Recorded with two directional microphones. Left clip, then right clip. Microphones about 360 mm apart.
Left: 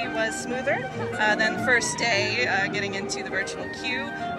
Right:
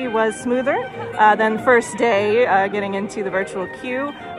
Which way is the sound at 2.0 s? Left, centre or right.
Centre.